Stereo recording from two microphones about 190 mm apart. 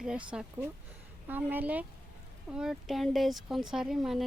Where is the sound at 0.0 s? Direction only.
5° right (ahead or behind).